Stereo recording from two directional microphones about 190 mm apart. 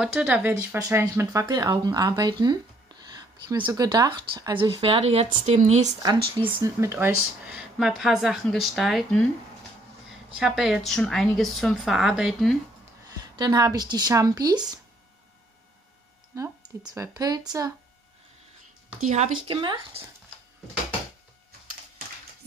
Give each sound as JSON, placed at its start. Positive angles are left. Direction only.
{"t": 0.0, "sound": "speech", "side_deg": -5}
{"t": 6.0, "sound": "speech", "side_deg": -20}
{"t": 10.3, "sound": "speech", "side_deg": 0}
{"t": 13.4, "sound": "speech", "side_deg": -20}
{"t": 16.3, "sound": "speech", "side_deg": -15}
{"t": 18.9, "sound": "speech", "side_deg": -40}
{"t": 19.4, "sound": "speech", "side_deg": -25}